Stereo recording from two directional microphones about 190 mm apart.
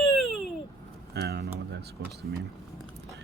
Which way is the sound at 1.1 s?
60° right (ahead or behind).